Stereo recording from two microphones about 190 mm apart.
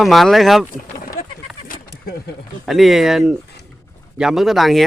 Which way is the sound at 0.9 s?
50° left (ahead or behind).